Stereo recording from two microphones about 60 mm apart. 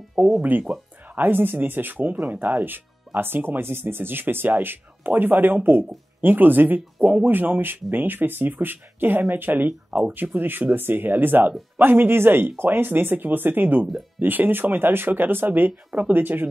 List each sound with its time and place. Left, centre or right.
0.4 s speech: right